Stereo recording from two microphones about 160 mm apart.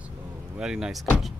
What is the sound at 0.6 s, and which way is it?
Speech, 5° right (ahead or behind).